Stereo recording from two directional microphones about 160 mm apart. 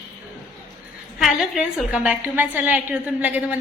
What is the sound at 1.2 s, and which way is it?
A woman's voice, centre (ahead or behind).